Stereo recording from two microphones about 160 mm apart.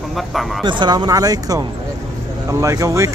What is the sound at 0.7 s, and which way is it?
Speech, 30° right (ahead or behind).